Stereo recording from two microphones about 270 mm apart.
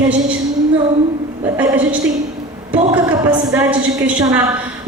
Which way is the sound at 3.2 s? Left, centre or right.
Centre.